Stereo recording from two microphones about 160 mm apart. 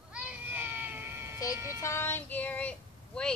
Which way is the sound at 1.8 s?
15° left (ahead or behind).